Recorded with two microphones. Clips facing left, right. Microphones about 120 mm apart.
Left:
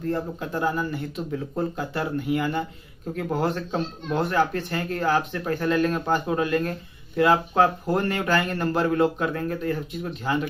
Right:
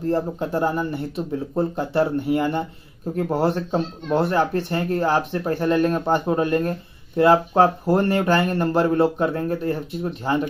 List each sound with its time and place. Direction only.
0.0 s speech: 30° right (ahead or behind)